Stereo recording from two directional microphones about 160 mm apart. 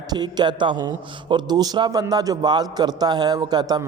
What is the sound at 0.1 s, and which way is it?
A man's voice, 25° right (ahead or behind).